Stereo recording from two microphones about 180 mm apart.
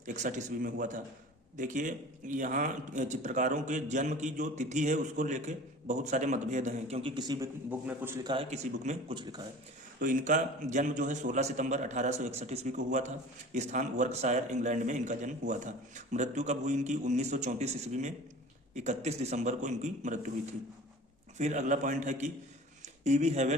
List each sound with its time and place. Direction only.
0.0 s speech: 45° right (ahead or behind); by 8.1 s 10° right (ahead or behind)
8.2 s a man's voice: 25° right (ahead or behind)
8.4 s a man's voice: 40° right (ahead or behind)
21.3 s a man's voice: 40° right (ahead or behind)